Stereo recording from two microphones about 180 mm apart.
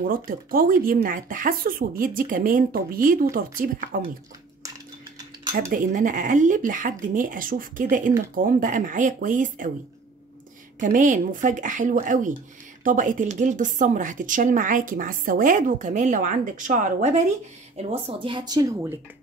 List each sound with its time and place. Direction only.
0.0 s speech: 50° right (ahead or behind)
5.7 s speech: 45° right (ahead or behind)
10.8 s speech: 45° right (ahead or behind); by 18.9 s 15° right (ahead or behind)